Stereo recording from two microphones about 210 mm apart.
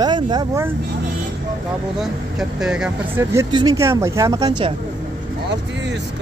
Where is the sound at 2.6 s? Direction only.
5° right (ahead or behind).